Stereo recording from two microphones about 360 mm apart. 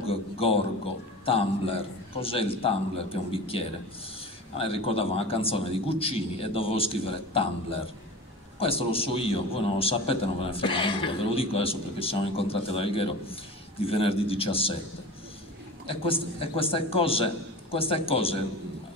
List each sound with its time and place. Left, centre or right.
0.0 s a sound: centre
1.2 s a man's voice: centre
15.9 s a man's voice: centre